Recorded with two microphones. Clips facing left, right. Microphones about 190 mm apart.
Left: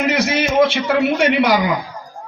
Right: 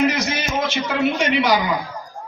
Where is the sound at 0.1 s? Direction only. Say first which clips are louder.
Left 6 dB; 65° left (ahead or behind).